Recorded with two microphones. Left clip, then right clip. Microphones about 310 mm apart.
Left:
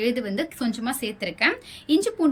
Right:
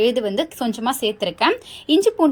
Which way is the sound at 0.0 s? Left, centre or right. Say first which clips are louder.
Right 7 dB; centre.